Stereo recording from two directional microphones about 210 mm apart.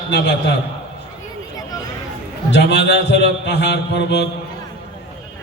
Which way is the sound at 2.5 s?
55° left (ahead or behind).